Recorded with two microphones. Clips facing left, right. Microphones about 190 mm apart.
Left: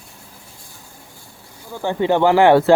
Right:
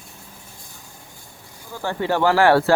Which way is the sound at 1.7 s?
20° left (ahead or behind).